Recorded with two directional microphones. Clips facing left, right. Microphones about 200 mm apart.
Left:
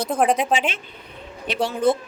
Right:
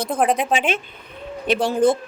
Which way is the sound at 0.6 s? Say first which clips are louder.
Right 3 dB; 55° right (ahead or behind).